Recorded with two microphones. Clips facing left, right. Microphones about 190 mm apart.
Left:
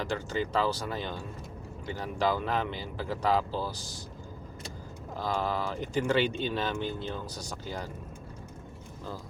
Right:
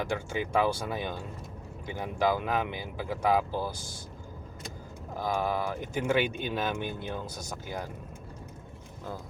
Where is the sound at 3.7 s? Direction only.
50° right (ahead or behind).